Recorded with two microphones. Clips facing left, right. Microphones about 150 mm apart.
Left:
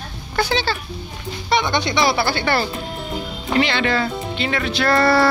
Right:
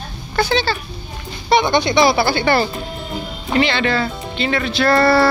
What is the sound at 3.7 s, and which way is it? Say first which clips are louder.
Speech: right 1 dB; 10° left (ahead or behind).